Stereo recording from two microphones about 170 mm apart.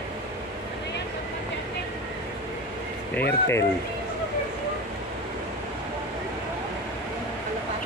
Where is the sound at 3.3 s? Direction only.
15° left (ahead or behind).